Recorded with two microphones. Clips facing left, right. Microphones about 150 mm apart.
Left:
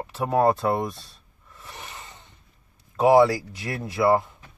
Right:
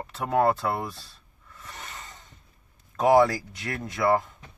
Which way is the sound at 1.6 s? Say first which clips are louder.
Left 1 dB; 15° left (ahead or behind).